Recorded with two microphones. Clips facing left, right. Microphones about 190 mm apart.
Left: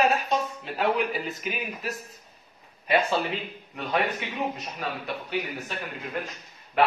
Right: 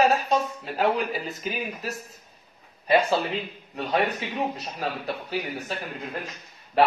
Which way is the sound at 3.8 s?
35° right (ahead or behind).